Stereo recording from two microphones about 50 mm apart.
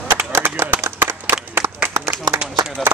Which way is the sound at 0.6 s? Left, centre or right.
Right.